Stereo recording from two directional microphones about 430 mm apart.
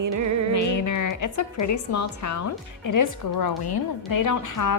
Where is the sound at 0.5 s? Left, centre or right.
Left.